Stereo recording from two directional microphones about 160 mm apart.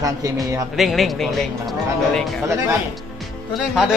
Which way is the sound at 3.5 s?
Centre (ahead or behind).